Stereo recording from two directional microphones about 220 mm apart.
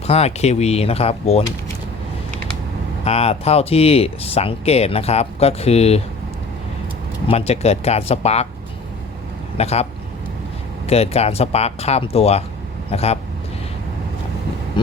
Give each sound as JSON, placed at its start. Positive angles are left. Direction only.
{"t": 0.1, "sound": "speech", "side_deg": 30}
{"t": 3.0, "sound": "speech", "side_deg": 30}
{"t": 7.3, "sound": "speech", "side_deg": 30}
{"t": 9.6, "sound": "speech", "side_deg": 30}
{"t": 10.8, "sound": "speech", "side_deg": 30}